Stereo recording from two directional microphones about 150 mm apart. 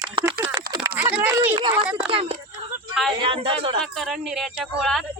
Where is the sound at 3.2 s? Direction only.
35° right (ahead or behind).